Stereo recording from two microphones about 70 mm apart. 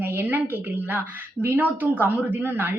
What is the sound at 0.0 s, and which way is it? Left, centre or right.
A woman's voice, right.